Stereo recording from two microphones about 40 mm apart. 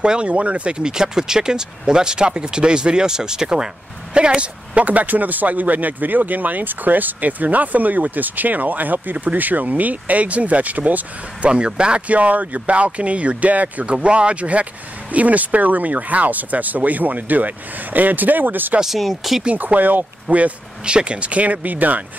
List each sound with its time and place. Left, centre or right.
0.0 s speech: right
4.7 s speech: right
11.4 s speech: right
12.1 s speech: right
13.9 s speech: right
18.9 s speech: centre
19.5 s speech: right
20.8 s speech: right